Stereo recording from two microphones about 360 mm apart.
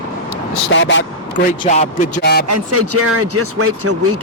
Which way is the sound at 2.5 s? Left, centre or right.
Right.